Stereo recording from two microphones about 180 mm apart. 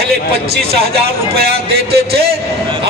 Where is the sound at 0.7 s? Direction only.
35° right (ahead or behind).